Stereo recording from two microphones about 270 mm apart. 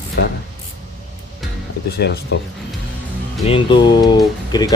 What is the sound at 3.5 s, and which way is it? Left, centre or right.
Speech, centre.